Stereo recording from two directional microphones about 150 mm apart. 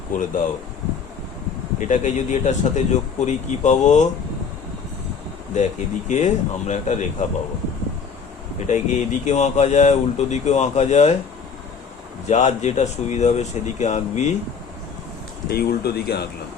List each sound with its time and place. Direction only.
0.1 s speech: 60° left (ahead or behind)
1.8 s speech: 55° left (ahead or behind)
5.5 s speech: 50° left (ahead or behind)
8.5 s speech: 50° left (ahead or behind)
12.3 s speech: 50° left (ahead or behind)
15.4 s speech: 90° left